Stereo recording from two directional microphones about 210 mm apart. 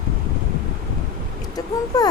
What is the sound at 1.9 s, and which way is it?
Speech, 15° left (ahead or behind).